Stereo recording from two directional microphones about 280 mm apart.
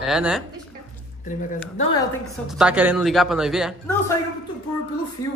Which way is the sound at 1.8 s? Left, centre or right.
Centre.